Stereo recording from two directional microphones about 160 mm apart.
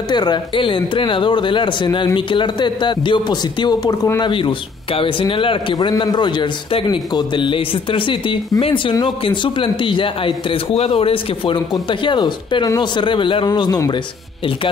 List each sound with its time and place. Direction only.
0.1 s a man's voice: 25° left (ahead or behind)
4.3 s a man's voice: 35° left (ahead or behind)